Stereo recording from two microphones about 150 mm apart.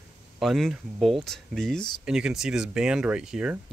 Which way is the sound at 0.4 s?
Centre (ahead or behind).